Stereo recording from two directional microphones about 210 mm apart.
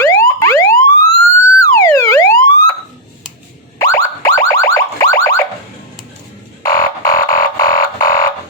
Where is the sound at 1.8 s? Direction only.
15° left (ahead or behind).